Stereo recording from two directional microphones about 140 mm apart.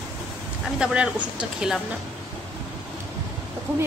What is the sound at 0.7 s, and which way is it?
Speech, 5° right (ahead or behind).